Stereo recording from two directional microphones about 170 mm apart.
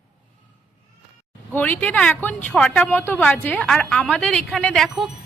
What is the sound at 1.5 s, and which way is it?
A woman's voice, 10° left (ahead or behind).